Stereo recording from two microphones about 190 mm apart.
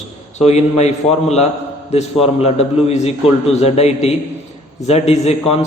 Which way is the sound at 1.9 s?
30° left (ahead or behind).